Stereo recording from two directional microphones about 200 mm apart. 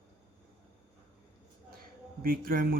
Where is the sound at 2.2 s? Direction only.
45° right (ahead or behind).